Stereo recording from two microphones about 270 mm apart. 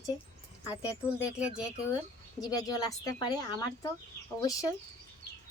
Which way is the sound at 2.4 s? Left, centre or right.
Centre.